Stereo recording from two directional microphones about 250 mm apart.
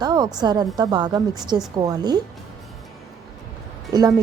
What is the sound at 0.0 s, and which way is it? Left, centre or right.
A woman's voice, centre.